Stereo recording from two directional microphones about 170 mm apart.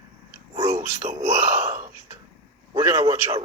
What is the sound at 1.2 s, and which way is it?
Speech, 15° right (ahead or behind).